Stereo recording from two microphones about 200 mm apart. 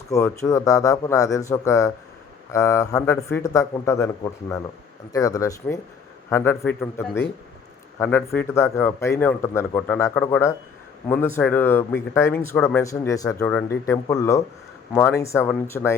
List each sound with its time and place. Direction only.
0.1 s a man's voice: 15° left (ahead or behind)